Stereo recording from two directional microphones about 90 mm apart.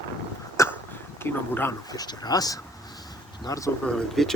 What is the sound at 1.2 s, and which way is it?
Speech, 25° left (ahead or behind).